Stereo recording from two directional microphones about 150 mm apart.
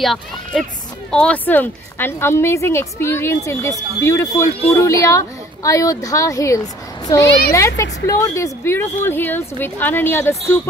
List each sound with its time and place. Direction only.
0.0 s speech: centre (ahead or behind)